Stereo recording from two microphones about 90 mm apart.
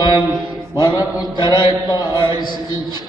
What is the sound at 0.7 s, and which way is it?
Mantra, 50° left (ahead or behind).